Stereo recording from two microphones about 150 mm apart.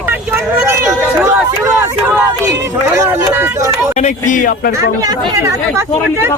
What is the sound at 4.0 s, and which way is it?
Speech, 50° left (ahead or behind).